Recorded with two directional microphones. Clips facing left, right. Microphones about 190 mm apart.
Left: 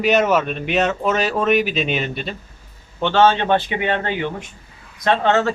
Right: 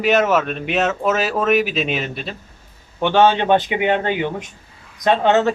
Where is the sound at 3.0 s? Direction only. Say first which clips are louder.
Right 1 dB; 15° right (ahead or behind).